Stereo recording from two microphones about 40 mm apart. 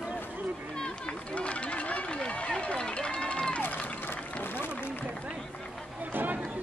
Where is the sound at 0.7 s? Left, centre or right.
Centre.